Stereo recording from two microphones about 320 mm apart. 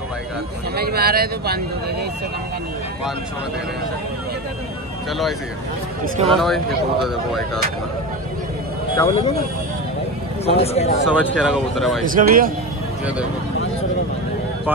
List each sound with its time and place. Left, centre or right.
0.7 s speech: right
6.2 s speech: centre
8.9 s speech: centre
10.4 s speech: centre
11.1 s speech: centre
12.1 s speech: right